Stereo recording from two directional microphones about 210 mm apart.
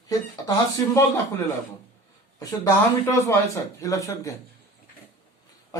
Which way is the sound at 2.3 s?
15° left (ahead or behind).